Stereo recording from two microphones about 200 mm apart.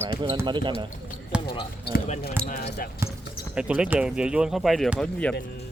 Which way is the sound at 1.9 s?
50° left (ahead or behind).